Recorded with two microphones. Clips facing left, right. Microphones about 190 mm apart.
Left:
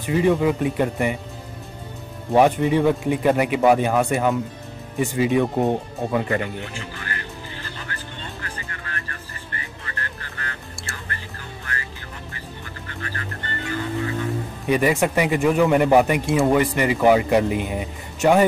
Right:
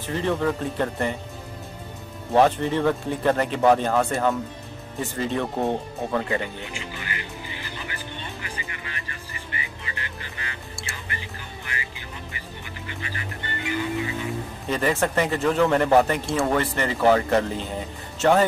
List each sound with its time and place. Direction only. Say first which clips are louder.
0.0 s speech: left 5 dB; 10° left (ahead or behind)
2.3 s speech: left 3 dB; 15° left (ahead or behind)
6.4 s music: left 3 dB; 15° right (ahead or behind)
14.7 s speech: left 4 dB; 15° left (ahead or behind)